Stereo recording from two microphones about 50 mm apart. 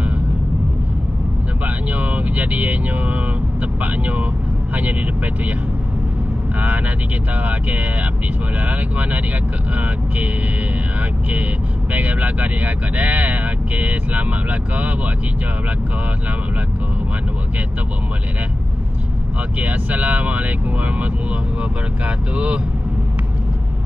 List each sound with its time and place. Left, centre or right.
2.0 s speech: right
7.4 s speech: right
11.0 s speech: right
19.6 s speech: right
22.0 s speech: right